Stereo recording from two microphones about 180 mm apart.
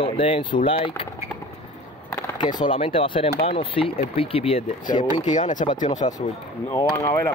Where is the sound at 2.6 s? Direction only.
30° left (ahead or behind).